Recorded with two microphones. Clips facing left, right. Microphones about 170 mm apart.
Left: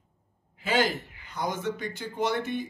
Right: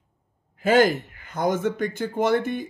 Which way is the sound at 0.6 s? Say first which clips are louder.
Right 8 dB; 50° right (ahead or behind).